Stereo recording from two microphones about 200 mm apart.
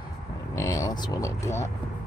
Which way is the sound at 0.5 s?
15° left (ahead or behind).